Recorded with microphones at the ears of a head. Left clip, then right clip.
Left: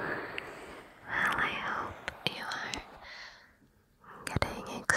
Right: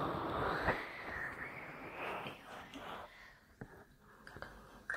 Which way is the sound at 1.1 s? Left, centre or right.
Left.